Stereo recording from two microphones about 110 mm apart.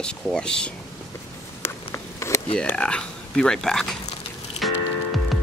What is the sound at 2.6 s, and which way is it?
Speech, 10° left (ahead or behind).